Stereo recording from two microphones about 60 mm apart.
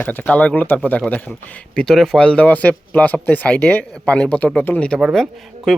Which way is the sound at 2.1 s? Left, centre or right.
Centre.